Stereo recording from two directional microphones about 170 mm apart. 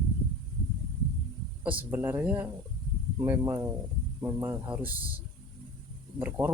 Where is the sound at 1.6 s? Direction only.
10° right (ahead or behind).